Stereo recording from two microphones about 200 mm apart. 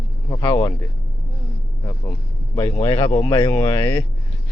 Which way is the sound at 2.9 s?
25° left (ahead or behind).